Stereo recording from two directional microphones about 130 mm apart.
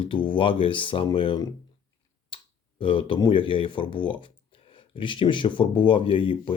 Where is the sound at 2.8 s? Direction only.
40° left (ahead or behind).